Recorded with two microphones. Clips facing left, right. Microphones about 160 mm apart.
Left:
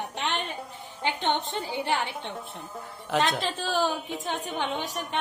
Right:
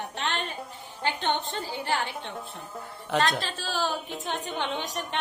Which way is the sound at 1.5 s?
20° left (ahead or behind).